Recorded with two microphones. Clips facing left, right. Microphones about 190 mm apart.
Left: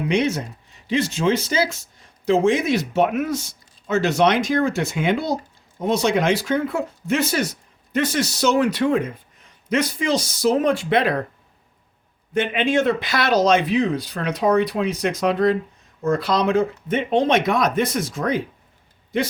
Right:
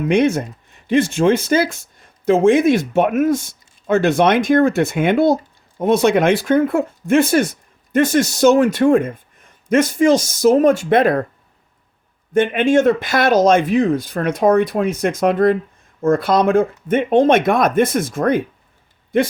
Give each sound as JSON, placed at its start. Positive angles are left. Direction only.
{"t": 0.0, "sound": "speech", "side_deg": -50}
{"t": 12.3, "sound": "speech", "side_deg": -50}